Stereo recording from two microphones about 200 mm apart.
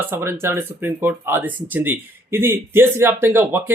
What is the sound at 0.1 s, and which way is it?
Speech, 10° right (ahead or behind).